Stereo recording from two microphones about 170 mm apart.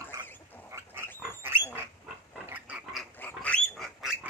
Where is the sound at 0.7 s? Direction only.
15° right (ahead or behind).